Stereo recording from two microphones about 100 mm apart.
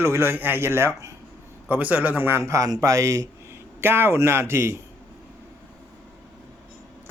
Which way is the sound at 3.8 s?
20° right (ahead or behind).